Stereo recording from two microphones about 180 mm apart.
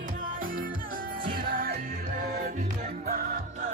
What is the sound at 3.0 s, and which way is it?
Music, 50° right (ahead or behind).